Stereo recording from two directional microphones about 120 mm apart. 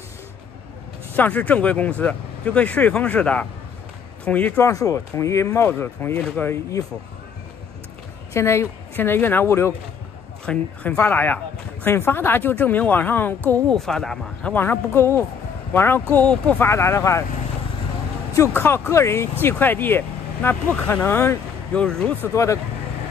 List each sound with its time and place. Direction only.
1.1 s speech: 15° left (ahead or behind)
4.6 s speech: 25° left (ahead or behind); by 6.5 s 10° left (ahead or behind)
8.3 s a woman's voice: 25° left (ahead or behind)
10.4 s speech: 10° left (ahead or behind)
13.7 s speech: 5° left (ahead or behind)
14.5 s speech: 20° left (ahead or behind)
16.6 s speech: 20° left (ahead or behind)
18.3 s speech: 25° left (ahead or behind)
20.7 s speech: 5° left (ahead or behind)
21.1 s speech: 20° left (ahead or behind)
21.7 s speech: 5° left (ahead or behind)
22.3 s speech: 25° left (ahead or behind)